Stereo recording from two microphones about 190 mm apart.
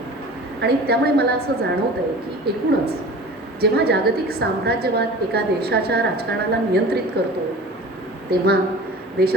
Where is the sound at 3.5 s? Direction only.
60° right (ahead or behind).